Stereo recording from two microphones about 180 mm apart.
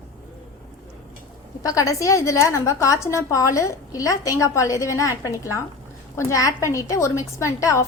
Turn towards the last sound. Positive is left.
turn(degrees=15)  # may be behind; listen again after turning